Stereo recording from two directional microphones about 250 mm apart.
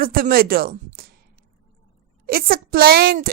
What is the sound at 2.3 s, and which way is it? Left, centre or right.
A woman's voice, right.